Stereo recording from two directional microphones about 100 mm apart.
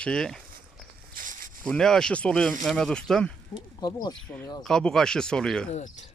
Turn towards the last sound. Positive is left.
turn(degrees=10)  # may be behind; listen again after turning